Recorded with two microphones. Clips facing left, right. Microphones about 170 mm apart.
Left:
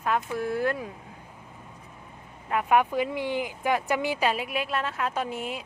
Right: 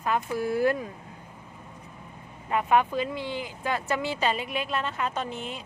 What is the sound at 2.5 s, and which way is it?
Speech, 5° left (ahead or behind).